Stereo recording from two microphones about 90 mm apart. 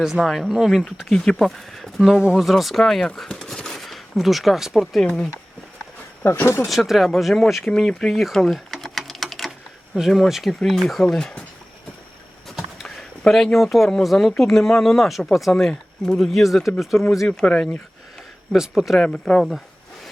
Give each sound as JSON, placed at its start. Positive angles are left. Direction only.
{"t": 0.0, "sound": "speech", "side_deg": 0}
{"t": 1.1, "sound": "speech", "side_deg": 10}
{"t": 6.2, "sound": "speech", "side_deg": 25}
{"t": 6.7, "sound": "speech", "side_deg": 0}
{"t": 7.6, "sound": "typing", "side_deg": 10}
{"t": 9.9, "sound": "speech", "side_deg": 0}
{"t": 12.5, "sound": "speech", "side_deg": 0}
{"t": 18.5, "sound": "speech", "side_deg": -5}